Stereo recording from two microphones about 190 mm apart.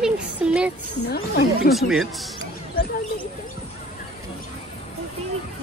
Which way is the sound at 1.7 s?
Centre (ahead or behind).